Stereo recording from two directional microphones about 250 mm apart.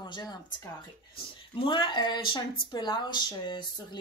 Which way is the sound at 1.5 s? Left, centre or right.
Centre.